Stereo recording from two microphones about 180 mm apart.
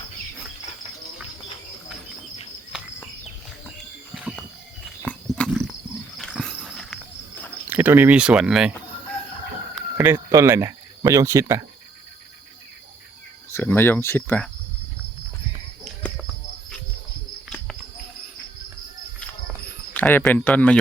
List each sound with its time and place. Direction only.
4.1 s mechanisms: 5° right (ahead or behind)
5.0 s a sound: 5° left (ahead or behind)
6.1 s walk: centre (ahead or behind)
7.7 s speech: 10° right (ahead or behind)
10.0 s speech: 10° right (ahead or behind)
13.5 s speech: 10° left (ahead or behind)
19.9 s speech: 10° left (ahead or behind)